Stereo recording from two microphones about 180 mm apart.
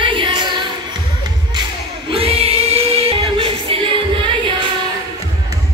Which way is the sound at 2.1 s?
35° right (ahead or behind).